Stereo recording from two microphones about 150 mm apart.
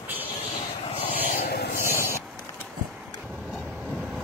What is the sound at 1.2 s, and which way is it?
Vehicle, 80° left.